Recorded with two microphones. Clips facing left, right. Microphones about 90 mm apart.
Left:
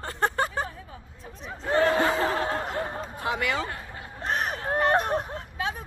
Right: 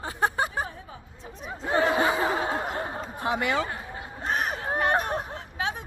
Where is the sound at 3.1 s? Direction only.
25° right (ahead or behind).